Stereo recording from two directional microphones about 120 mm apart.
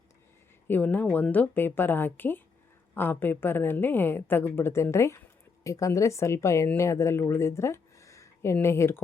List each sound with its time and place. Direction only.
0.7 s a woman's voice: 15° left (ahead or behind)